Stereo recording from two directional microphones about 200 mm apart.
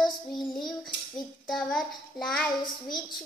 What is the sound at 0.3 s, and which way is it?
Child singing, 20° left (ahead or behind).